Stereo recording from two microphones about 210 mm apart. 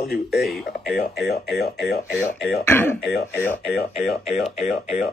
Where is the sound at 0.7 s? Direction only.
50° left (ahead or behind).